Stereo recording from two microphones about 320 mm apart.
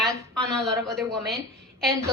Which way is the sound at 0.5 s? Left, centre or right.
Centre.